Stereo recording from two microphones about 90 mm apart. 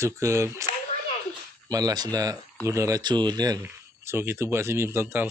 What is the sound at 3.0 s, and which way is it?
Speech, 55° right (ahead or behind).